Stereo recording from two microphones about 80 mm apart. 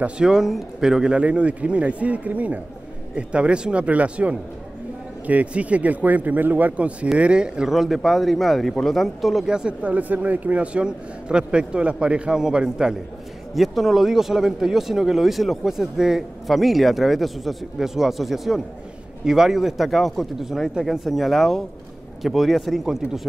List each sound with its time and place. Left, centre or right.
0.0 s speech: centre